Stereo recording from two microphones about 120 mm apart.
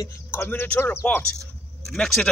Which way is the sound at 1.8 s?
5° left (ahead or behind).